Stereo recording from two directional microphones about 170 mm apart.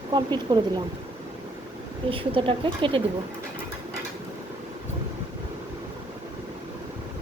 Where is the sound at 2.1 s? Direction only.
30° right (ahead or behind).